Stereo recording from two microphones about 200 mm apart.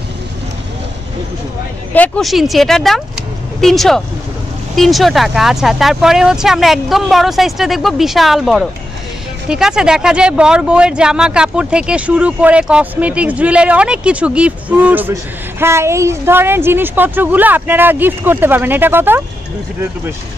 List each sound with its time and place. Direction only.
2.0 s a woman's voice: centre (ahead or behind)